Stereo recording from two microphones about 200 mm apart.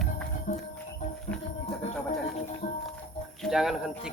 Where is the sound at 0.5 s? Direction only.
40° left (ahead or behind).